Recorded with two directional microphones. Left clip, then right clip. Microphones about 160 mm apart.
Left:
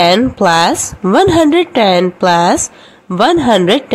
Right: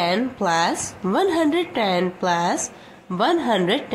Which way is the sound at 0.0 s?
55° left (ahead or behind).